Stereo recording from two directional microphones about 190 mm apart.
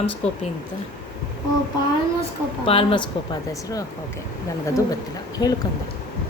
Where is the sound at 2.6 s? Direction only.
30° left (ahead or behind).